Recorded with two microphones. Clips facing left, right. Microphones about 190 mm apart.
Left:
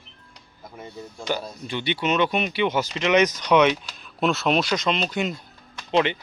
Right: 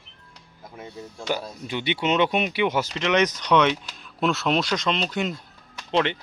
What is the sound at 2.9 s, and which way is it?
Speech, 5° left (ahead or behind).